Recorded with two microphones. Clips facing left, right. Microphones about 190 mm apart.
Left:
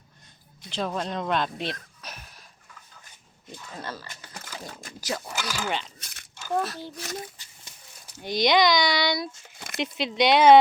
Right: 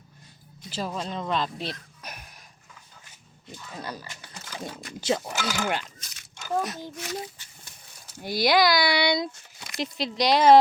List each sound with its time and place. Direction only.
0.7 s speech: 5° right (ahead or behind)
2.0 s a sound: 10° right (ahead or behind)
3.7 s speech: 15° right (ahead or behind)
4.9 s speech: 25° right (ahead or behind)
6.0 s a sound: 55° left (ahead or behind)
6.6 s speech: 15° right (ahead or behind)
8.2 s speech: 5° right (ahead or behind)
9.7 s speech: centre (ahead or behind)